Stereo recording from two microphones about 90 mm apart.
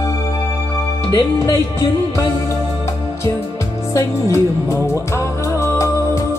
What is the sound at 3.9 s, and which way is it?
Music, 35° left (ahead or behind).